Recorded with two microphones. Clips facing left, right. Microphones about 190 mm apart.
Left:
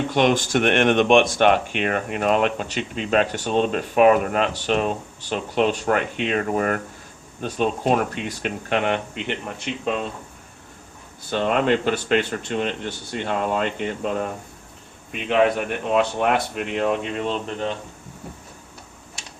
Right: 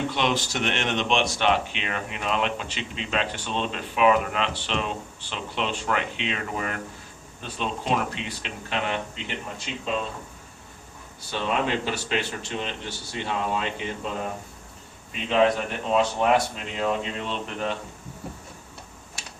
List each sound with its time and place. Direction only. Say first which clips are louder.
0.1 s speech: left 7 dB; 50° left (ahead or behind)
11.3 s speech: left 6 dB; 55° left (ahead or behind)
15.9 s speech: left 1 dB; 60° left (ahead or behind)